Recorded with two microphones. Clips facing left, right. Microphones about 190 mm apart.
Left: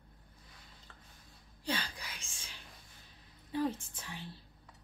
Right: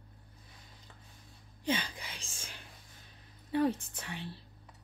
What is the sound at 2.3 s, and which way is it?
Whispering, 45° right (ahead or behind).